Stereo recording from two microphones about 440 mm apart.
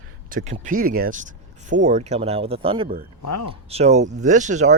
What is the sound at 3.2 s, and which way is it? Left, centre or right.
Speech, left.